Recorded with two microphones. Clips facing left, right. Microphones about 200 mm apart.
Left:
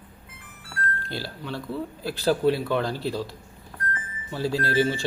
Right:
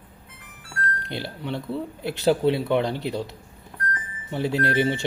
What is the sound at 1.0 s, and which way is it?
Speech, 20° right (ahead or behind).